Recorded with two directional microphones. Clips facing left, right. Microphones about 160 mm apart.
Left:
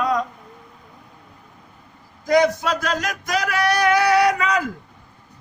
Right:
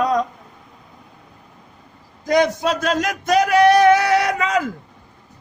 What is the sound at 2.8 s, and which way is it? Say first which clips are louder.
Music: right 4 dB; 25° right (ahead or behind).